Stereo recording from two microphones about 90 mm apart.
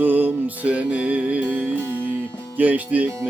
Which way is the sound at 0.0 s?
20° right (ahead or behind).